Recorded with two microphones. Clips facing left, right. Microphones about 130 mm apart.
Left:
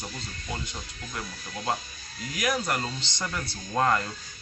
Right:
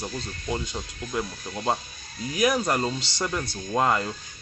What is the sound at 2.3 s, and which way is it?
Speech, 25° right (ahead or behind).